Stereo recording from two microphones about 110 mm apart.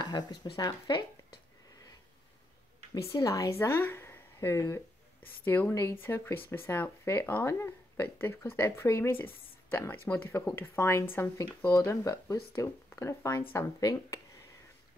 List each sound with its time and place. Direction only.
0.0 s speech: 40° left (ahead or behind)
3.2 s speech: 30° left (ahead or behind)
13.7 s speech: 35° left (ahead or behind)